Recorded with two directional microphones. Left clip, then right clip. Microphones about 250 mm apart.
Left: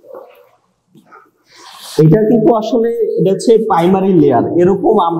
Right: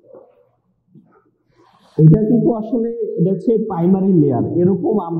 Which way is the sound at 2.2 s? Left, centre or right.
Centre.